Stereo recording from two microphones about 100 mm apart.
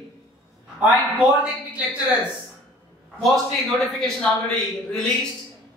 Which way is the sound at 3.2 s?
Centre (ahead or behind).